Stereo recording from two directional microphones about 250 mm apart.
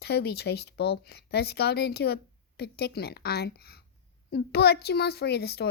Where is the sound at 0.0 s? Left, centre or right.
Left.